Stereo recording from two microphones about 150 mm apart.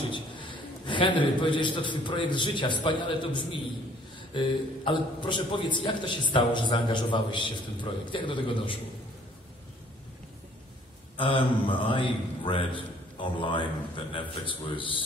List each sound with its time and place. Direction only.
0.1 s a man's voice: 35° left (ahead or behind)
11.1 s a man's voice: 35° left (ahead or behind)